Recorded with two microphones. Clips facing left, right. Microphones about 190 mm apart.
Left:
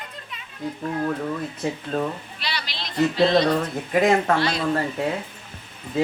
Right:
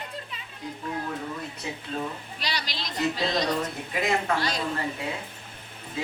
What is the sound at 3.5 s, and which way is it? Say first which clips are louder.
Speech: left 6 dB; 50° left (ahead or behind).